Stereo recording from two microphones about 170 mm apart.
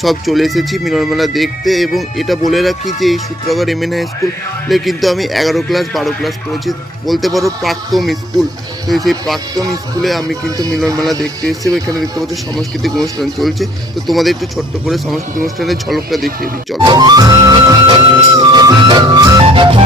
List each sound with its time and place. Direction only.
0.0 s speech: centre (ahead or behind)
10.8 s music: 20° right (ahead or behind)
12.3 s speech: centre (ahead or behind)
16.7 s music: 25° right (ahead or behind)